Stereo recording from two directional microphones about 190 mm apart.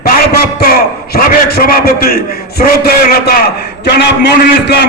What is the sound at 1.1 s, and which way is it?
A man's voice, 50° left (ahead or behind).